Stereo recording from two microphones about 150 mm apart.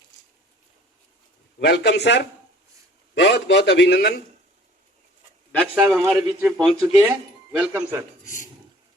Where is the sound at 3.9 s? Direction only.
90° left.